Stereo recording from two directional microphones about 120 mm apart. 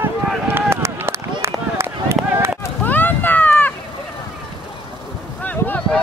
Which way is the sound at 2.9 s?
15° left (ahead or behind).